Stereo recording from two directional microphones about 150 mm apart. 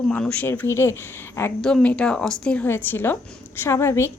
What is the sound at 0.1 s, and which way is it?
A woman's voice, 10° left (ahead or behind).